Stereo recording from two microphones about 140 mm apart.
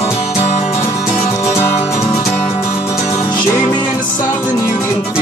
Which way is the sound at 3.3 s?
30° left (ahead or behind).